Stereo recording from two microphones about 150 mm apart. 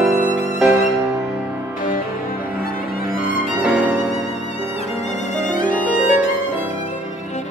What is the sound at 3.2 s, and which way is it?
Violin, 5° right (ahead or behind).